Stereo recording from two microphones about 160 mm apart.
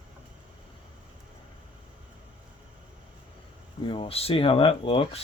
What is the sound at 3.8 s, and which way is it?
Speech, 35° left (ahead or behind).